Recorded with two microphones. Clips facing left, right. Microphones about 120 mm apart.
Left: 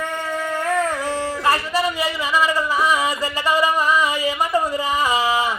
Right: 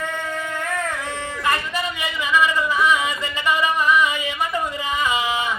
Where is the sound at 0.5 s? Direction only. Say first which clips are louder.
Left 8 dB; 35° left (ahead or behind).